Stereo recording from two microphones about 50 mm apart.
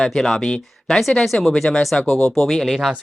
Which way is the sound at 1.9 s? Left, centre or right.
Left.